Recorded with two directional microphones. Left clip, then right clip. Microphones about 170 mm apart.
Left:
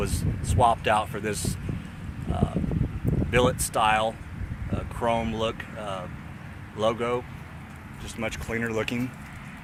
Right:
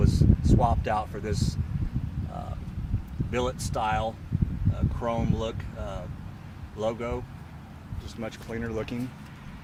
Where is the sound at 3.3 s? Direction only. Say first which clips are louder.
Left 6 dB; 25° left (ahead or behind).